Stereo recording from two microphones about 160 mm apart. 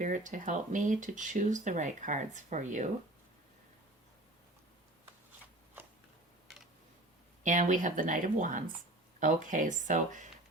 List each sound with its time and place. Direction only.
0.0 s speech: 55° right (ahead or behind)
7.4 s speech: 50° right (ahead or behind)